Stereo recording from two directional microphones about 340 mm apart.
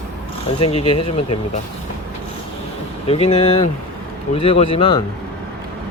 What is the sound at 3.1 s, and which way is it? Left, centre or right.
Speech, centre.